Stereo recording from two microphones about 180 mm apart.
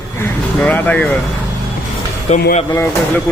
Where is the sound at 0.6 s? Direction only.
5° left (ahead or behind).